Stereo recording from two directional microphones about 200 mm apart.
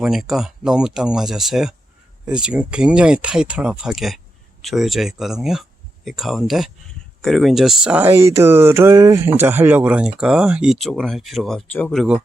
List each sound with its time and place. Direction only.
0.0 s speech: centre (ahead or behind)